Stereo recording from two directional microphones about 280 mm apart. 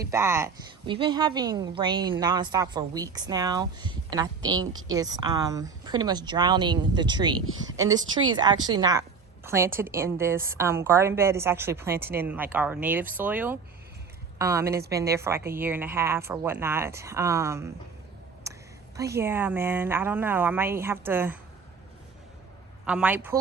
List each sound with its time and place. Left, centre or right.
0.1 s speech: centre
11.9 s speech: right
12.2 s speech: centre
18.5 s a sound: centre
18.9 s speech: centre
22.9 s a woman's voice: centre